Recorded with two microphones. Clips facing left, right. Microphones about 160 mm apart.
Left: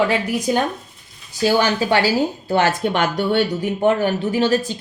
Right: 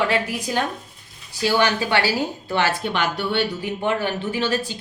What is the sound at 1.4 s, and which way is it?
Speech, 40° left (ahead or behind).